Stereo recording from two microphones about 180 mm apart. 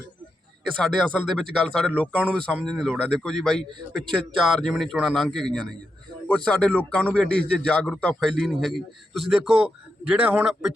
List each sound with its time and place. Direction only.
0.8 s a man's voice: 5° left (ahead or behind)